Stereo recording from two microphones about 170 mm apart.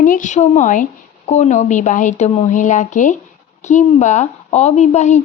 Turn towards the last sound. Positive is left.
turn(degrees=45)  # may be behind; listen again after turning